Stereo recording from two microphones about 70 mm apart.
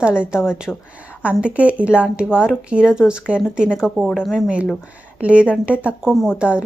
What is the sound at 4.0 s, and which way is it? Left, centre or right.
Speech, centre.